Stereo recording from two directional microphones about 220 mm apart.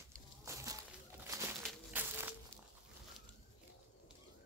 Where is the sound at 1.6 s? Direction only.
10° right (ahead or behind).